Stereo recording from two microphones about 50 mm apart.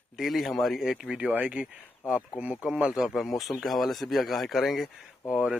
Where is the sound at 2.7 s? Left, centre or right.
Centre.